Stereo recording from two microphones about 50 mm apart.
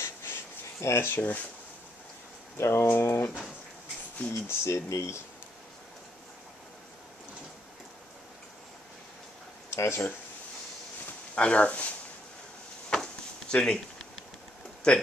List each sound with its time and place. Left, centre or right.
0.0 s a sound: left
2.5 s speech: left
4.3 s speech: left
9.7 s speech: left
11.3 s speech: left
13.5 s speech: centre